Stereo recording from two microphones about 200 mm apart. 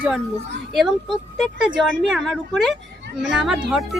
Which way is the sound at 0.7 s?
Centre (ahead or behind).